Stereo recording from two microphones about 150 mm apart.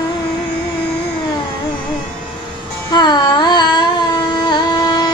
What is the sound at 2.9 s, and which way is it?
Carnatic music, 30° left (ahead or behind).